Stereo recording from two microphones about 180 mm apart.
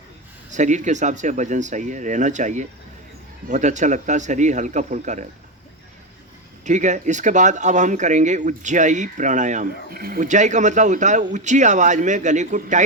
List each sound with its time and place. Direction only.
0.5 s speech: 40° right (ahead or behind)
6.7 s speech: 40° right (ahead or behind)